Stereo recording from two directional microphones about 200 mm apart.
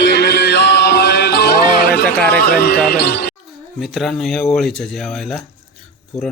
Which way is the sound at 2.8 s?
55° left (ahead or behind).